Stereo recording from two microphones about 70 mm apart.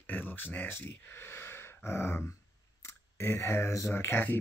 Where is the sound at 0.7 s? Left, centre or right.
Left.